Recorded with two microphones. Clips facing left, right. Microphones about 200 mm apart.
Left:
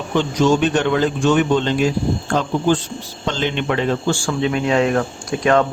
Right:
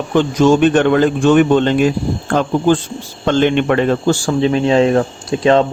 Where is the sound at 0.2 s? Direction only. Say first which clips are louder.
Right 5 dB; 55° right (ahead or behind).